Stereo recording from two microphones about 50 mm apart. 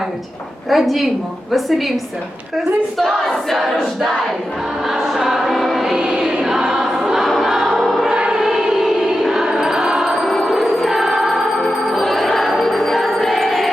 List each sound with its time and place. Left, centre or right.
0.7 s a woman's voice: centre
3.0 s a sound: centre
5.0 s a sound: centre
5.8 s choir: centre
6.1 s choir: centre
8.0 s choir: centre
9.3 s music: centre
10.2 s music: centre
10.5 s music: centre